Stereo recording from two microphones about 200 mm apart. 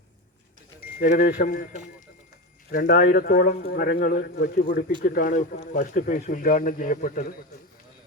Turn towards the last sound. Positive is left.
turn(degrees=45)  # may be behind; listen again after turning